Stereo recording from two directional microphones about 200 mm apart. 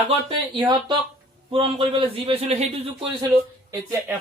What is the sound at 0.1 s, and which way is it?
A man's voice, 25° right (ahead or behind).